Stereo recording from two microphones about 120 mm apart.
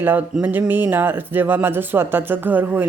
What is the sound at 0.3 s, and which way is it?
Speech, 10° right (ahead or behind).